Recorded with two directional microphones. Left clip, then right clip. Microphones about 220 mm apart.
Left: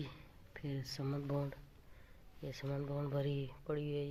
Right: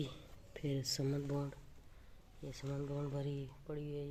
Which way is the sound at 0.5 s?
20° right (ahead or behind).